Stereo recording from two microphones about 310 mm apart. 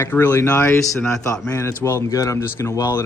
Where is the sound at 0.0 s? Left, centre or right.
Centre.